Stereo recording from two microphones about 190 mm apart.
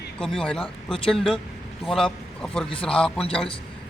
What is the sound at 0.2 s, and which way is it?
Speech, 5° left (ahead or behind).